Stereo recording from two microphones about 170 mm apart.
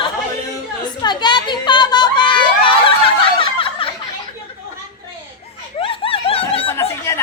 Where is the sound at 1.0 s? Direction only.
25° left (ahead or behind).